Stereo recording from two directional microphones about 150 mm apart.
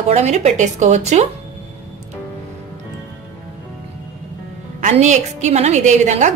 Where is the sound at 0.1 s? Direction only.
50° right (ahead or behind).